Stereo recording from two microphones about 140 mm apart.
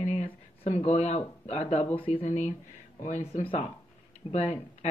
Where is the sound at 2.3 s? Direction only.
55° left (ahead or behind).